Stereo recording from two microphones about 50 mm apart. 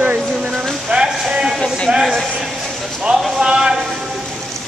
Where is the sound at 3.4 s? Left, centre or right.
Centre.